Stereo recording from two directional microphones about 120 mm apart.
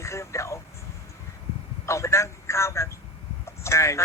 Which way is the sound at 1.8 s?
25° left (ahead or behind).